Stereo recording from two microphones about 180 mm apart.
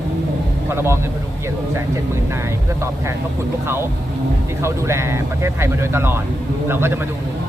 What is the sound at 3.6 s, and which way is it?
Speech, 15° right (ahead or behind).